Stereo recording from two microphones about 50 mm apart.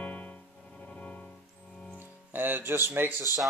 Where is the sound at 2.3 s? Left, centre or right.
Right.